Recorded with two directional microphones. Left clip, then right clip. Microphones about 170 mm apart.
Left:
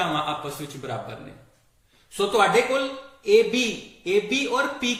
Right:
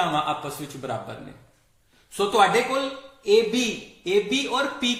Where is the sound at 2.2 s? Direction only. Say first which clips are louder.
Even; 45° right (ahead or behind).